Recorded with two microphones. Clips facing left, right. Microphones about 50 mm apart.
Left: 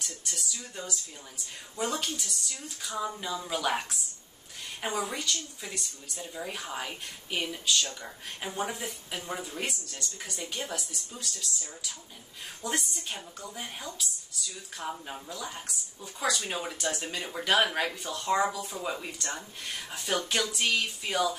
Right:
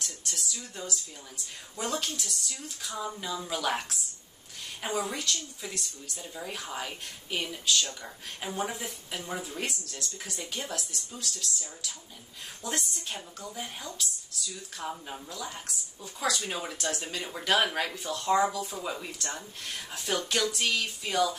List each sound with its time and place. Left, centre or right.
0.0 s speech: centre
4.8 s a woman's voice: left
5.1 s speech: centre